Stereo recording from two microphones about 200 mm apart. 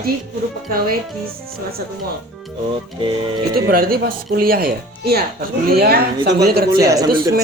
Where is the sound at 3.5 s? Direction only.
45° right (ahead or behind).